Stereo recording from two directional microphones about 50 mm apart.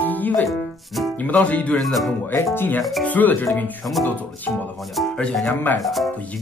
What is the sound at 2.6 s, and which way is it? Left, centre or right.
Speech, left.